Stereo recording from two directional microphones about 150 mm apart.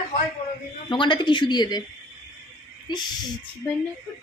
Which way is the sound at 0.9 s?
30° left (ahead or behind).